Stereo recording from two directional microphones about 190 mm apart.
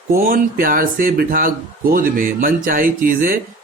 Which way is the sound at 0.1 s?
45° right (ahead or behind).